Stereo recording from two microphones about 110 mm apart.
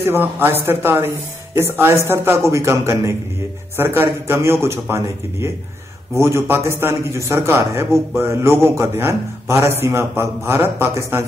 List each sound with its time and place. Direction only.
0.0 s a man's voice: 20° right (ahead or behind)